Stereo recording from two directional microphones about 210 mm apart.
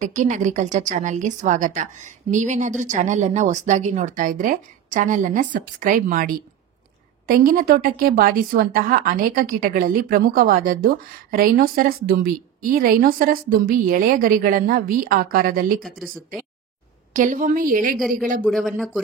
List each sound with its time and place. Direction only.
0.0 s a woman's voice: 35° right (ahead or behind)
17.1 s a woman's voice: 40° right (ahead or behind)
18.4 s speech: centre (ahead or behind)